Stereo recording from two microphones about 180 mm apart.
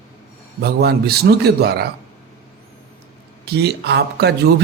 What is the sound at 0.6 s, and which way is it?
A man's voice, 60° right (ahead or behind).